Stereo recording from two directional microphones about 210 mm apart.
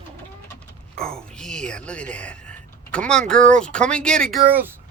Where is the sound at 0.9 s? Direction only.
5° left (ahead or behind).